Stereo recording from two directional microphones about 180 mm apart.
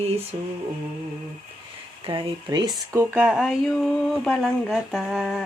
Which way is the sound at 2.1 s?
25° right (ahead or behind).